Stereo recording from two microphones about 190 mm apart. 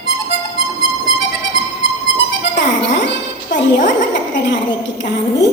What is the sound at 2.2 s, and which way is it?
Music, 65° left (ahead or behind).